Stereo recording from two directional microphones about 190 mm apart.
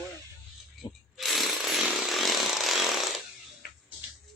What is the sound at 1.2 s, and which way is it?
Chainsaw, centre (ahead or behind).